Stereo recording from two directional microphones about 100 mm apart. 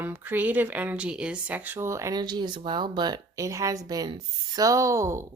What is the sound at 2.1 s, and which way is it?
Speech, 45° right (ahead or behind).